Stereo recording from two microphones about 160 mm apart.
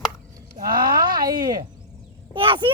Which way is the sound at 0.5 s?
65° right (ahead or behind).